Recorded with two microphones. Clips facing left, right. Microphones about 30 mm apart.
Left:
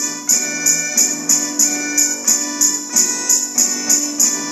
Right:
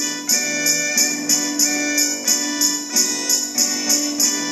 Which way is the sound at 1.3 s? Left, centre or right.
Right.